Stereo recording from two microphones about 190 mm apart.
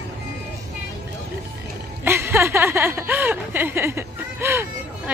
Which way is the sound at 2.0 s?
15° right (ahead or behind).